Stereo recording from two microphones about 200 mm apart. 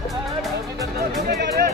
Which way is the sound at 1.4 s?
55° right (ahead or behind).